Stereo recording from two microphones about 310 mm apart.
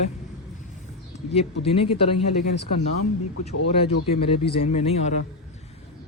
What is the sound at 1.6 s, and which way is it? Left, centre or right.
Speech, centre.